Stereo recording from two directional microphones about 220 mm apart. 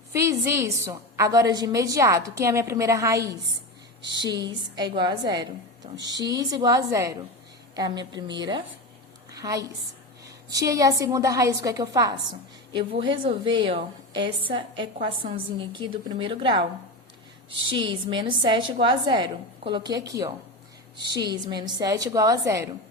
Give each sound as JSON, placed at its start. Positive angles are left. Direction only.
{"t": 0.1, "sound": "a woman's voice", "side_deg": -15}
{"t": 17.7, "sound": "a woman's voice", "side_deg": -20}